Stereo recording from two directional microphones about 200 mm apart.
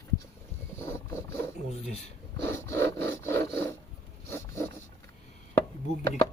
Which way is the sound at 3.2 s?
10° left (ahead or behind).